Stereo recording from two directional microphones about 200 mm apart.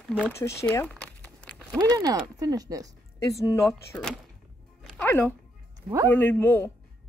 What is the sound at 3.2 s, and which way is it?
Speech, 15° left (ahead or behind).